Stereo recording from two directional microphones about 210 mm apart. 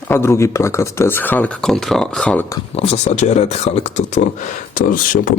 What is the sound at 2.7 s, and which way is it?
Speech, 30° left (ahead or behind).